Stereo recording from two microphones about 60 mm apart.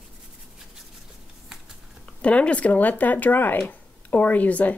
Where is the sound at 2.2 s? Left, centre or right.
Centre.